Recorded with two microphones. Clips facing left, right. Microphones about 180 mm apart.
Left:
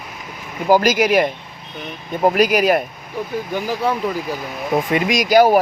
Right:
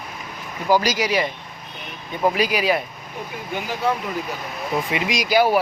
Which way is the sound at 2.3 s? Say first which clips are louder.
Left 6 dB; 45° left (ahead or behind).